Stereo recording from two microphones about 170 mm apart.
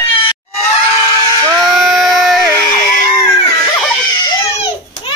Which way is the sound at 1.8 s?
Centre (ahead or behind).